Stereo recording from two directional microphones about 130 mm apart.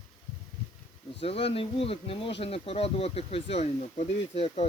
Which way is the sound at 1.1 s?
50° left (ahead or behind).